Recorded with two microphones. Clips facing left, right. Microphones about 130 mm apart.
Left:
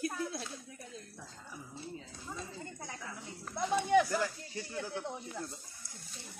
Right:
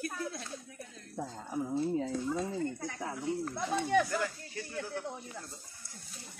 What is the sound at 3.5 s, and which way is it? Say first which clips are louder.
Speech: left 3 dB; 15° left (ahead or behind).